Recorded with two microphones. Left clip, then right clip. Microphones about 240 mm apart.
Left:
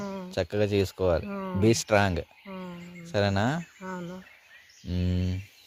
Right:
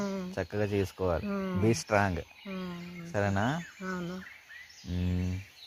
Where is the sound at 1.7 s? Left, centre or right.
Left.